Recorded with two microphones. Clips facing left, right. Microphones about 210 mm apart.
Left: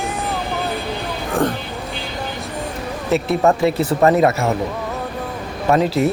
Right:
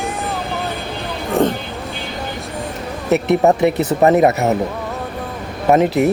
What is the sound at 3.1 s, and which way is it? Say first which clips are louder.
Speech: right 3 dB; 20° right (ahead or behind).